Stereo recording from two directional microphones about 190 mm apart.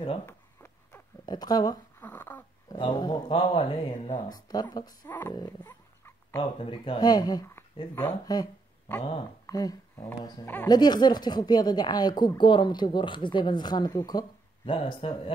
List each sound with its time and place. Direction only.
0.3 s a sound: 10° left (ahead or behind)
2.0 s a sound: 10° left (ahead or behind)
2.8 s speech: 20° left (ahead or behind)
5.0 s speech: 10° left (ahead or behind)
5.3 s speech: 20° left (ahead or behind)
5.7 s dog: 10° left (ahead or behind)
6.6 s speech: 30° left (ahead or behind); by 8.4 s 10° left (ahead or behind)
9.5 s speech: 20° left (ahead or behind)
10.7 s speech: 20° left (ahead or behind)